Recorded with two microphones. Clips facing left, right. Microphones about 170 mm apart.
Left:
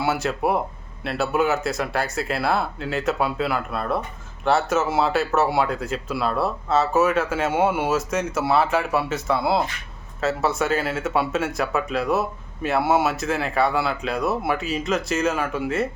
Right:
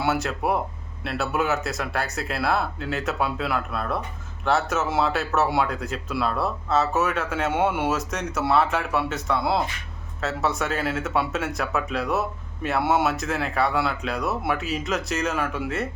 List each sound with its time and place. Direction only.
0.0 s speech: centre (ahead or behind)